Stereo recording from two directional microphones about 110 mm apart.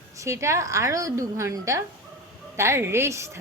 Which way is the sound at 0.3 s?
25° right (ahead or behind).